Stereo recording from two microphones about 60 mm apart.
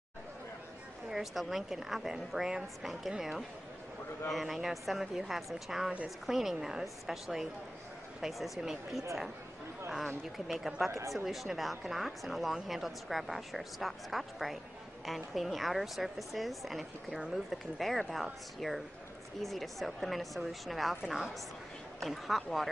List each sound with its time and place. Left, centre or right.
1.1 s speech: centre
10.9 s speech: right
11.1 s a woman's voice: centre